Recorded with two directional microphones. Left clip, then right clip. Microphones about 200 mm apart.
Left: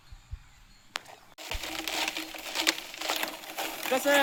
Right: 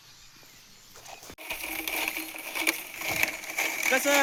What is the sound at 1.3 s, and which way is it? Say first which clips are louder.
Crushing: right 1 dB; 5° left (ahead or behind).